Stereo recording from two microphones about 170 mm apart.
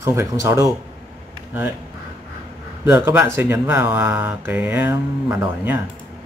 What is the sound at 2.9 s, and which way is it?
Speech, 15° right (ahead or behind).